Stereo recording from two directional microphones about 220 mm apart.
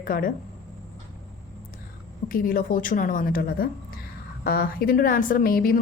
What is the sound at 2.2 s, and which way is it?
A woman's voice, 40° left (ahead or behind).